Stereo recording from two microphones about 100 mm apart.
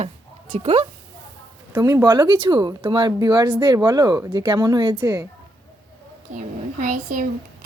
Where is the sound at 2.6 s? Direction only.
45° right (ahead or behind).